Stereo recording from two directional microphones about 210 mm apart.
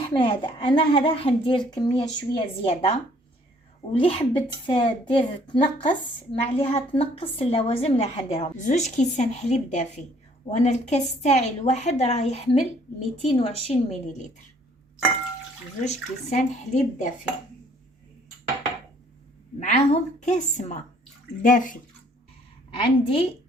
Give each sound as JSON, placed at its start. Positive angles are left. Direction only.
{"t": 0.0, "sound": "a woman's voice", "side_deg": 20}
{"t": 15.8, "sound": "a woman's voice", "side_deg": 35}
{"t": 19.5, "sound": "a woman's voice", "side_deg": 35}
{"t": 22.7, "sound": "a woman's voice", "side_deg": 25}